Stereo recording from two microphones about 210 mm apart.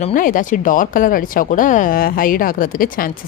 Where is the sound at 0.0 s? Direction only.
40° left (ahead or behind).